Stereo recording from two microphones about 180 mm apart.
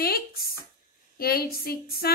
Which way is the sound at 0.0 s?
60° left (ahead or behind).